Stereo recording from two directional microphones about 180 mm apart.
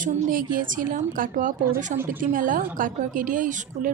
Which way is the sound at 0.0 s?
50° right (ahead or behind).